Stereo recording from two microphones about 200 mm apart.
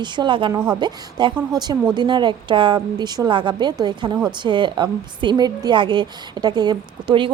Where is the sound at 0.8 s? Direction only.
20° right (ahead or behind).